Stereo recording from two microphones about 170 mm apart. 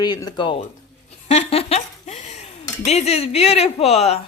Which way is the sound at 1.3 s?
35° left (ahead or behind).